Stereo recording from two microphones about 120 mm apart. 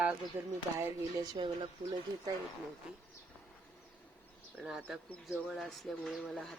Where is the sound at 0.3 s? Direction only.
20° right (ahead or behind).